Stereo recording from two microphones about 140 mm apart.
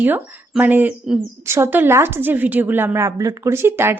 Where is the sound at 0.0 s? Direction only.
15° right (ahead or behind).